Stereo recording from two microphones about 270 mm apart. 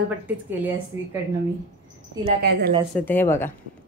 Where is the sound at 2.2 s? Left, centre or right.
Right.